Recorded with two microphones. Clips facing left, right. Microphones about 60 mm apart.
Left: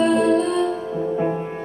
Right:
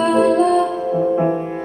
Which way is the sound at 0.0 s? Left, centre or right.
Right.